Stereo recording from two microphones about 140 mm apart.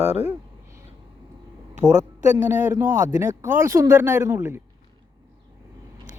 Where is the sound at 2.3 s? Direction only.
15° right (ahead or behind).